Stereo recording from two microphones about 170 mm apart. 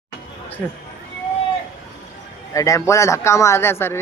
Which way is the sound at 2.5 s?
20° left (ahead or behind).